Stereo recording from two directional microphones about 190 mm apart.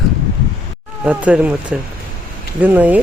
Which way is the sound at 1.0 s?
5° right (ahead or behind).